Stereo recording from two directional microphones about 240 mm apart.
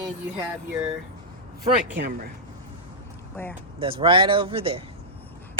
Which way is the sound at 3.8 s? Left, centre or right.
Right.